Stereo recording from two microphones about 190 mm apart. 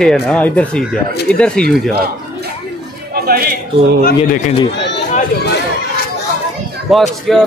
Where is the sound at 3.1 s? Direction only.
50° right (ahead or behind).